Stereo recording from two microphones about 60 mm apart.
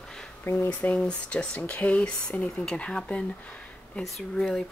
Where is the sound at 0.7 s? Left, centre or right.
Left.